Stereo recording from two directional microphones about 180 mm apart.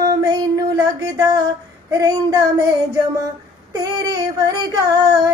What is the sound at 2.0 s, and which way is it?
Female singing, 20° right (ahead or behind).